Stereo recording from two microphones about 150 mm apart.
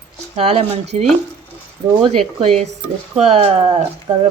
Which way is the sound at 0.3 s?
45° right (ahead or behind).